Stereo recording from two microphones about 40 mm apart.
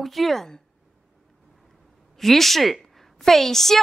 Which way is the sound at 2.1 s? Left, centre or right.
Centre.